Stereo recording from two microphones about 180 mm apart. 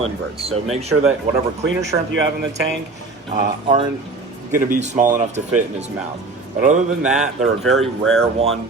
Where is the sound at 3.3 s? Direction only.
40° right (ahead or behind).